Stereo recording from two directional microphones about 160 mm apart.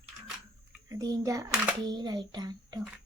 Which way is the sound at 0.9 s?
20° right (ahead or behind).